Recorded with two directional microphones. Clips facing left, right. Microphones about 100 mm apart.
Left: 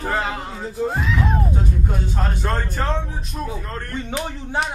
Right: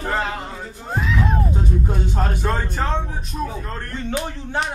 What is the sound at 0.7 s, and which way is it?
Music, centre (ahead or behind).